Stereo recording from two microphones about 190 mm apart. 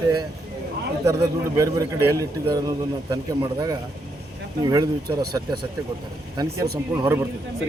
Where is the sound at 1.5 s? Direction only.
15° right (ahead or behind).